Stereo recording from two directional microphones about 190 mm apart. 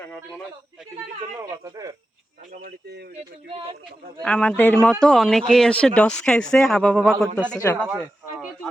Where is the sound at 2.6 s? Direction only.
55° right (ahead or behind).